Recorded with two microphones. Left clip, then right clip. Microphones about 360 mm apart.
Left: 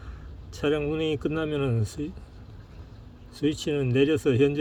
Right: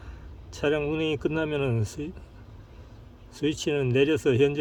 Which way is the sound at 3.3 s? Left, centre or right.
Centre.